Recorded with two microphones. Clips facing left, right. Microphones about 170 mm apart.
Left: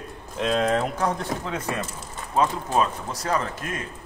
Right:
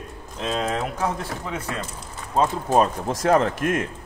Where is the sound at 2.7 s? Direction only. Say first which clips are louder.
Right 4 dB; 45° right (ahead or behind).